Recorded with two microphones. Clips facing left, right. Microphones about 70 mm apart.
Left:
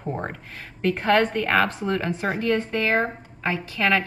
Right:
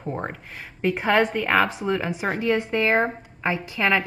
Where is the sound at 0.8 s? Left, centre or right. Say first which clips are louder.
Even; centre.